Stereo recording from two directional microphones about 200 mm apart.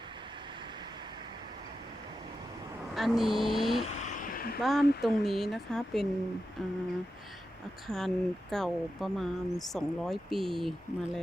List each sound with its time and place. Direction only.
2.9 s speech: centre (ahead or behind)
4.2 s a sound: 50° left (ahead or behind)
4.6 s speech: centre (ahead or behind)
7.9 s speech: centre (ahead or behind)